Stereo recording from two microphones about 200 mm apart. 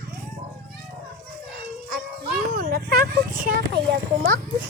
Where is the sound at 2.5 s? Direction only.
50° right (ahead or behind).